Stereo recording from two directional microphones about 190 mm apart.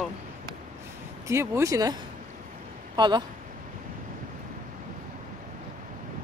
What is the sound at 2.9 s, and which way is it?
Speech, 25° right (ahead or behind).